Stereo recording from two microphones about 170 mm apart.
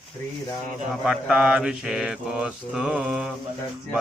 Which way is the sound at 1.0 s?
5° right (ahead or behind).